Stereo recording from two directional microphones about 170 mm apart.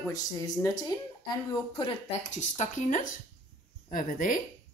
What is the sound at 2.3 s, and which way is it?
Speech, 45° left (ahead or behind).